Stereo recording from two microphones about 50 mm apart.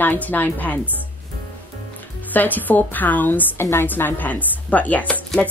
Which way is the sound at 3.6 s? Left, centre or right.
Left.